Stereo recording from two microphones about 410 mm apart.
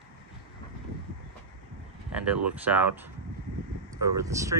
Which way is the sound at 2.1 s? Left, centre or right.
Centre.